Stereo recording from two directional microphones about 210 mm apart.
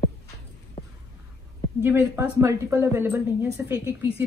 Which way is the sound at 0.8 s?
30° left (ahead or behind).